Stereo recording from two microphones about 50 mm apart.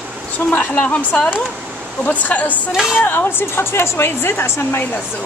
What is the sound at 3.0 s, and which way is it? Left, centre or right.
A woman's voice, left.